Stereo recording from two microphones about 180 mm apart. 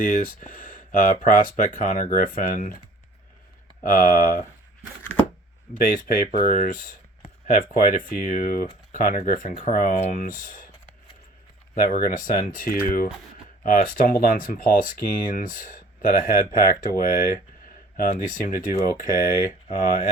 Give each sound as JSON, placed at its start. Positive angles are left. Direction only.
{"t": 0.0, "sound": "speech", "side_deg": 50}
{"t": 3.8, "sound": "speech", "side_deg": 55}
{"t": 5.7, "sound": "speech", "side_deg": 50}
{"t": 11.7, "sound": "speech", "side_deg": 50}